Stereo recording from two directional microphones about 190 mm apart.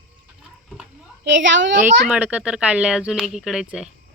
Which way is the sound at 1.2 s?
75° right (ahead or behind).